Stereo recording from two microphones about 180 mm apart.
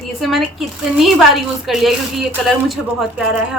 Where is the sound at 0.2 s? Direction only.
Centre (ahead or behind).